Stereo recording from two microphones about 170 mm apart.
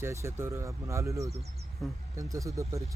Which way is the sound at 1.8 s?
Centre (ahead or behind).